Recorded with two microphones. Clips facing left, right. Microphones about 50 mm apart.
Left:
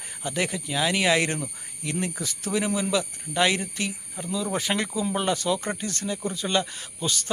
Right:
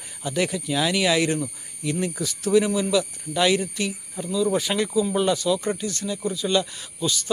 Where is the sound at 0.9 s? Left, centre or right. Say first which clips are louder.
Right 1 dB; left.